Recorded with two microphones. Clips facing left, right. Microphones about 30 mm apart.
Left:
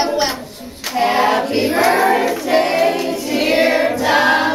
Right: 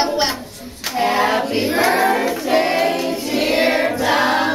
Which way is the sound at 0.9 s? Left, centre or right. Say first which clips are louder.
Left 2 dB; left.